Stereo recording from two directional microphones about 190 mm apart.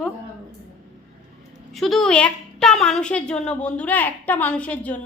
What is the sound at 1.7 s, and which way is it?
A woman's voice, centre (ahead or behind).